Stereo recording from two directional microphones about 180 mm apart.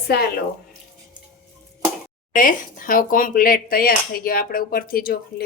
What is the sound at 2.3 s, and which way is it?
Speech, 50° left (ahead or behind).